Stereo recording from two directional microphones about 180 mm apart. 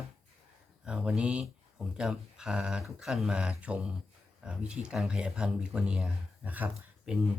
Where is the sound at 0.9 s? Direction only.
5° right (ahead or behind).